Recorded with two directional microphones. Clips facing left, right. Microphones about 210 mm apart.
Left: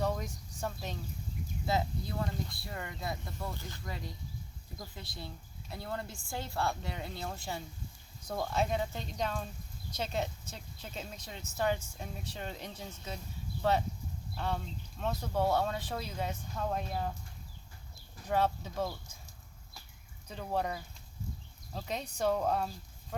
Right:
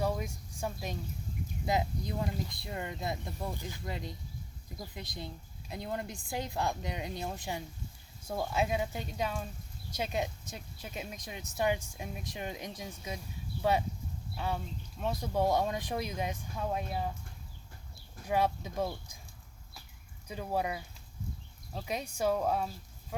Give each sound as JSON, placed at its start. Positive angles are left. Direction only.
{"t": 0.0, "sound": "speech", "side_deg": -10}
{"t": 18.3, "sound": "speech", "side_deg": -10}
{"t": 20.2, "sound": "speech", "side_deg": -10}